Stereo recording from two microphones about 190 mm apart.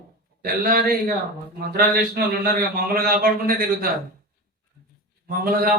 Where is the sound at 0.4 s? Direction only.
50° right (ahead or behind).